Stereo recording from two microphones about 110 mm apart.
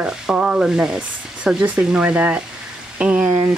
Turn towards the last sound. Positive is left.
turn(degrees=-10)  # may be behind; listen again after turning